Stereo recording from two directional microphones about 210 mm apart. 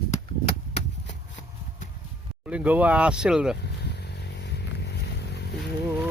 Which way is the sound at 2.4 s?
5° right (ahead or behind).